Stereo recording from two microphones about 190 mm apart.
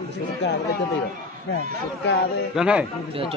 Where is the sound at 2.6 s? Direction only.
5° right (ahead or behind).